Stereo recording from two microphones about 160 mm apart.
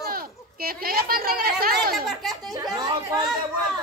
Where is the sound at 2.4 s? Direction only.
25° right (ahead or behind).